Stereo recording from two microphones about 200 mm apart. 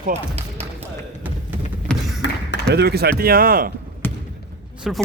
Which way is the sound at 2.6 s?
55° right (ahead or behind).